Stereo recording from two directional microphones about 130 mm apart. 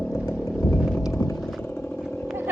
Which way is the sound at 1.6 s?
20° left (ahead or behind).